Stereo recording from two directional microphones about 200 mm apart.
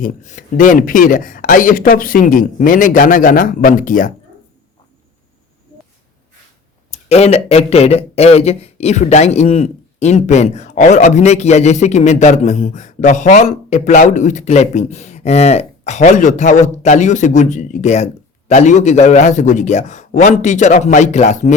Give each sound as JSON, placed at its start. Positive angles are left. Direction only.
{"t": 0.0, "sound": "speech", "side_deg": 40}
{"t": 6.9, "sound": "speech", "side_deg": 30}